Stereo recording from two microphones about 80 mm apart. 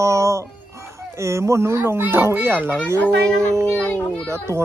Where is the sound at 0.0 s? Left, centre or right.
Right.